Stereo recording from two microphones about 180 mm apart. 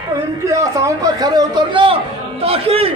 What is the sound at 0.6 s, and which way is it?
A man's voice, 20° right (ahead or behind).